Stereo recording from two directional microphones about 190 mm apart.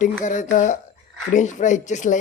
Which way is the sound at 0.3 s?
40° left (ahead or behind).